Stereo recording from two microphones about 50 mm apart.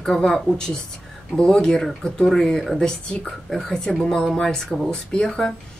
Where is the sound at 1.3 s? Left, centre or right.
Centre.